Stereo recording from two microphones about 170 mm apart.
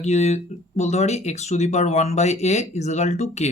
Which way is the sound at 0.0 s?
40° left (ahead or behind).